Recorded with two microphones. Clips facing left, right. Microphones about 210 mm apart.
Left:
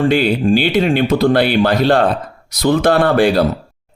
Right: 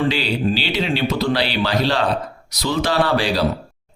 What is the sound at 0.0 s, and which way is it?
Speech, 50° left (ahead or behind).